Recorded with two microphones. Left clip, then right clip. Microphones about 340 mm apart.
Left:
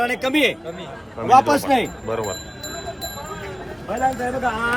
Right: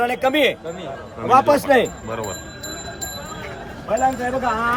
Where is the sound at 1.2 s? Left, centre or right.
Centre.